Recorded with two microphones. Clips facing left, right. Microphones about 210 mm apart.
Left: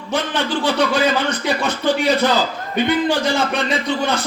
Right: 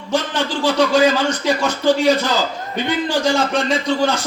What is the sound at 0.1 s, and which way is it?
A man's voice, 60° left (ahead or behind).